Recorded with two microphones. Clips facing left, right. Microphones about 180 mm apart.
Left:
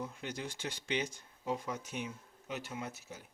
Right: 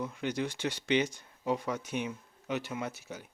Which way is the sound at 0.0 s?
75° right (ahead or behind).